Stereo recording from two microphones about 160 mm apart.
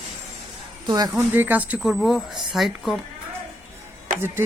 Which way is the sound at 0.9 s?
25° right (ahead or behind).